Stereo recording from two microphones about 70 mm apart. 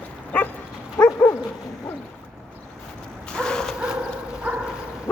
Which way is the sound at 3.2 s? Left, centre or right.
Centre.